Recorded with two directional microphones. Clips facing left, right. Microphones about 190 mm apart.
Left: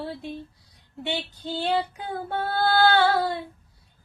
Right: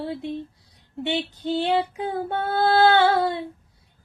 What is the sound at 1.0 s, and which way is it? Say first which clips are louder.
Female singing: right 5 dB; 20° right (ahead or behind).